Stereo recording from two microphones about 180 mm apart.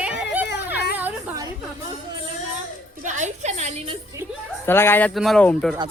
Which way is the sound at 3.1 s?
45° right (ahead or behind).